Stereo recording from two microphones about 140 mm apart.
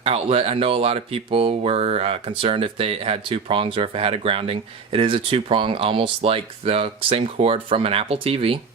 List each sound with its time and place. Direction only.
0.0 s speech: 45° right (ahead or behind)